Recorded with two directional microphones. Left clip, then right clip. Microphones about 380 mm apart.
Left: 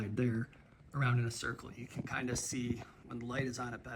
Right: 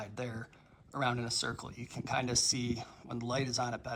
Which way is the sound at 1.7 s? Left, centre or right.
Centre.